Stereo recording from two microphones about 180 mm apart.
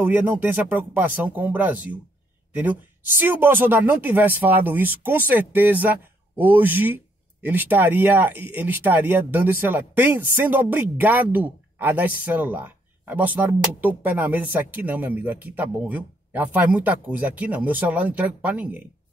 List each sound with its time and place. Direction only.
0.0 s speech: 10° right (ahead or behind)